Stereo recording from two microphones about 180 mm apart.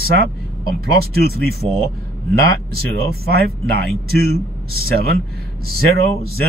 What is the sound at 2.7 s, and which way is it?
Speech, 60° right (ahead or behind).